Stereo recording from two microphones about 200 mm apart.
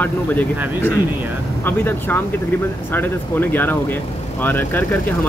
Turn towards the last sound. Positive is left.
turn(degrees=10)  # may be behind; listen again after turning